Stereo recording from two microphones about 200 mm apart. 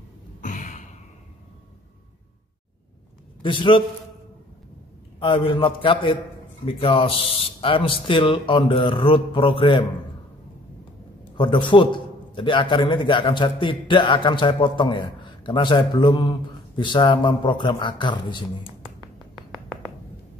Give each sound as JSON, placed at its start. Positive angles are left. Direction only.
{"t": 0.4, "sound": "a sound", "side_deg": 40}
{"t": 3.4, "sound": "a man's voice", "side_deg": 25}
{"t": 5.2, "sound": "a man's voice", "side_deg": 25}
{"t": 11.3, "sound": "a man's voice", "side_deg": 25}